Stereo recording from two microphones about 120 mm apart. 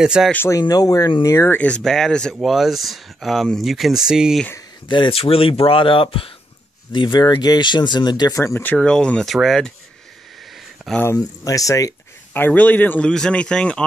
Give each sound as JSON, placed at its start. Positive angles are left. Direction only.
{"t": 0.0, "sound": "speech", "side_deg": -5}
{"t": 0.5, "sound": "speech", "side_deg": 30}
{"t": 1.8, "sound": "speech", "side_deg": 5}
{"t": 4.8, "sound": "speech", "side_deg": 40}
{"t": 8.7, "sound": "speech", "side_deg": 5}
{"t": 11.1, "sound": "speech", "side_deg": 30}
{"t": 12.4, "sound": "speech", "side_deg": 15}